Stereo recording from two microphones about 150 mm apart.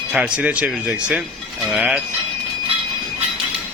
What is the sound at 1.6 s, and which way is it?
Cowbell, 5° right (ahead or behind).